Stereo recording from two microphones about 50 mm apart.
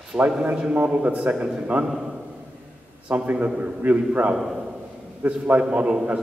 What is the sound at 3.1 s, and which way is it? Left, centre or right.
Speech, right.